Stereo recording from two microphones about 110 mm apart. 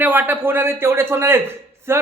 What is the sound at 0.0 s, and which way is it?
A man's voice, 15° right (ahead or behind).